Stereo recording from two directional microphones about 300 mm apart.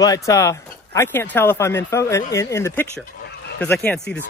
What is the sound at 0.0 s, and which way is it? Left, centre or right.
Speech, centre.